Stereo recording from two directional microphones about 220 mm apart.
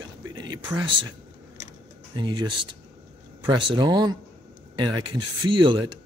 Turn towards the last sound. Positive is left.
turn(degrees=-20)  # may be behind; listen again after turning